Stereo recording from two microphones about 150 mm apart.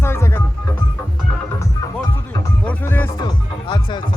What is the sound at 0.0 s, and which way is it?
Music, 15° left (ahead or behind).